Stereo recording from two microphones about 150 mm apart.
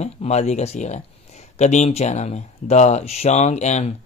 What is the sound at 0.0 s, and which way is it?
Speech, 50° left (ahead or behind).